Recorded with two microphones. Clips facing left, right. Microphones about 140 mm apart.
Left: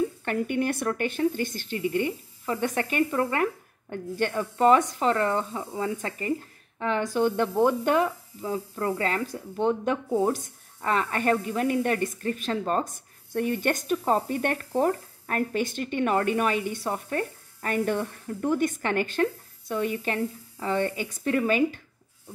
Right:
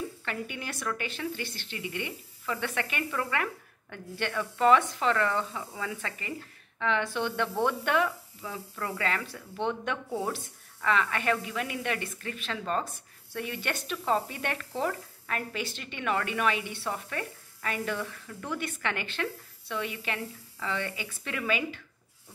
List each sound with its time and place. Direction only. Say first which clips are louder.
0.2 s speech: left 10 dB; 50° left (ahead or behind)
5.5 s speech: left 5 dB; 25° left (ahead or behind)
6.0 s speech: left 8 dB; 40° left (ahead or behind)
10.0 s speech: left 9 dB; 20° left (ahead or behind)
10.8 s speech: left 2 dB; 40° left (ahead or behind)